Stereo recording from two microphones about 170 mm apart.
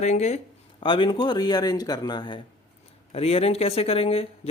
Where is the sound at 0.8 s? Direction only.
30° left (ahead or behind).